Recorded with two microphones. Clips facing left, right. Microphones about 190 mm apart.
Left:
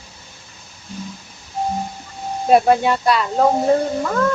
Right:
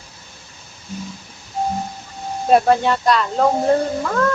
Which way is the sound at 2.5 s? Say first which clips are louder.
Left 1 dB; 10° left (ahead or behind).